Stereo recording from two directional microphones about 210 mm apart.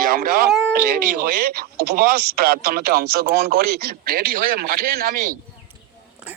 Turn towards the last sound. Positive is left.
turn(degrees=-5)  # may be behind; listen again after turning